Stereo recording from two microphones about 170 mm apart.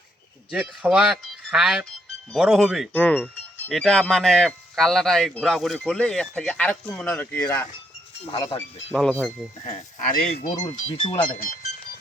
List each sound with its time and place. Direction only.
0.7 s speech: 5° right (ahead or behind)
2.9 s speech: 10° left (ahead or behind)
8.9 s speech: centre (ahead or behind)
9.6 s speech: 45° left (ahead or behind)
10.9 s speech: 30° left (ahead or behind)